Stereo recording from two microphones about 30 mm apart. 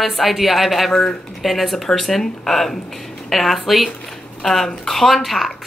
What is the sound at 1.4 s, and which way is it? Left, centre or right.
Speech, centre.